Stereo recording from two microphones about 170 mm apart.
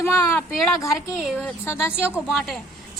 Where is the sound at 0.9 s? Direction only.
Centre (ahead or behind).